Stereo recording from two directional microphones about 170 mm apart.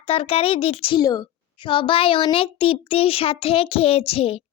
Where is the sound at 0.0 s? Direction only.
35° left (ahead or behind).